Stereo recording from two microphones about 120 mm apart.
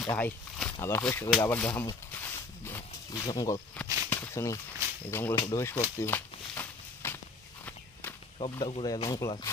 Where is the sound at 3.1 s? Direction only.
35° left (ahead or behind).